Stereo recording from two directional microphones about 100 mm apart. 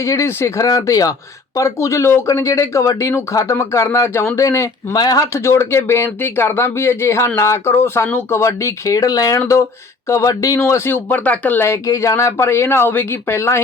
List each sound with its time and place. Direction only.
0.0 s speech: 30° left (ahead or behind)
4.9 s speech: 40° left (ahead or behind)